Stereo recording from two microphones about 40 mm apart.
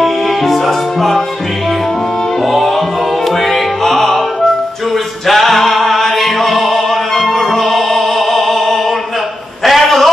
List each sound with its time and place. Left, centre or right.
0.0 s music: centre
3.4 s music: centre
5.2 s music: centre
9.7 s a sound: centre